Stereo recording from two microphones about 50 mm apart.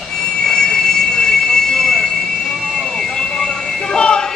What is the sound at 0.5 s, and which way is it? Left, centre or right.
Train, centre.